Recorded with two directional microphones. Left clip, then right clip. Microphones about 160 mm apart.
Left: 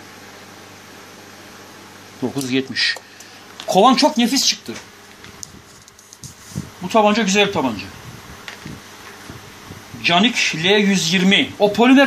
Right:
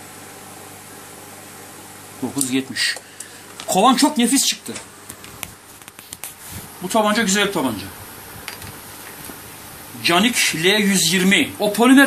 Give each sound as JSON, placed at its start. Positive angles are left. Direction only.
{"t": 2.5, "sound": "speech", "side_deg": 40}
{"t": 6.9, "sound": "speech", "side_deg": 30}
{"t": 10.0, "sound": "speech", "side_deg": 30}